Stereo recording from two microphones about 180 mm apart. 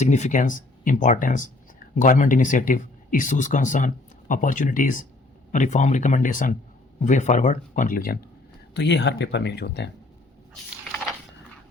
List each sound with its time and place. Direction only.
0.0 s speech: 40° left (ahead or behind)
8.7 s speech: 75° left (ahead or behind)
10.5 s a sound: 5° left (ahead or behind)